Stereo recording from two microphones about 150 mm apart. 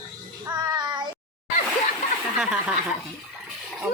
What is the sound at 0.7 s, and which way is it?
Child singing, 30° right (ahead or behind).